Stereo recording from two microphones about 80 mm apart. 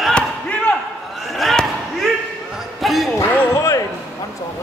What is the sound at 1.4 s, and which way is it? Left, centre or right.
Basketball bounce, centre.